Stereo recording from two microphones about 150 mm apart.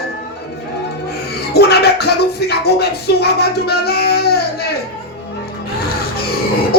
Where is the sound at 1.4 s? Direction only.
90° left.